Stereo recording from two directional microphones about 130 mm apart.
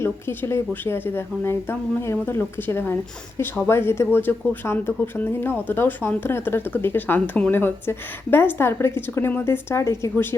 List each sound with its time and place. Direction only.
0.0 s speech: 20° left (ahead or behind)